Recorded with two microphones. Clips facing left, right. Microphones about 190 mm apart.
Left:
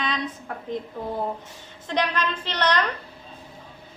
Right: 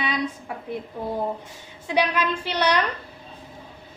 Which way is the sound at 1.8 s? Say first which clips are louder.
Right 3 dB; 10° right (ahead or behind).